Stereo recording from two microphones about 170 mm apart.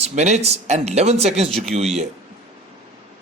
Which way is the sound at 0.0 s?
40° right (ahead or behind).